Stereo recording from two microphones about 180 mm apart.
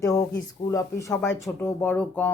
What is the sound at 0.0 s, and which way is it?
Speech, 20° left (ahead or behind).